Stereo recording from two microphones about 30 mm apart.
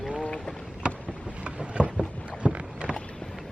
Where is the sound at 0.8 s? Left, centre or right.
Right.